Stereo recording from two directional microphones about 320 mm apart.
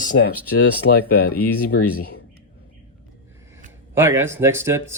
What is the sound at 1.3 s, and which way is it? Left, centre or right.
Speech, left.